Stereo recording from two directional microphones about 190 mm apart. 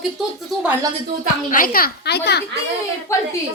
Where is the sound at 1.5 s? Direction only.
50° left (ahead or behind).